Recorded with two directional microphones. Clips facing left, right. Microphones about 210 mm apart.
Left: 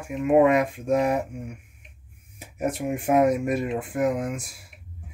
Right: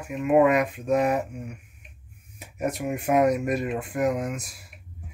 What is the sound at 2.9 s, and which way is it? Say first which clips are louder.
Speech: left 1 dB; 25° left (ahead or behind).